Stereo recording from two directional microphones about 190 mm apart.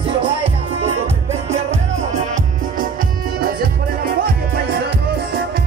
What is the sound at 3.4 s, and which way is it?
Music, 50° right (ahead or behind).